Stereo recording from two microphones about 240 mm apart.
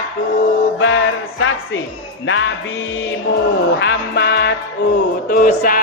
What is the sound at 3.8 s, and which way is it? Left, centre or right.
Music, left.